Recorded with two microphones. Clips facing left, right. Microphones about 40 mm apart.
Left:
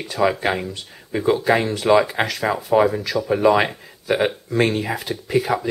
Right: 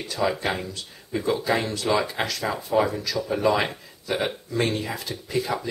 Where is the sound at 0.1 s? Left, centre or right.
Left.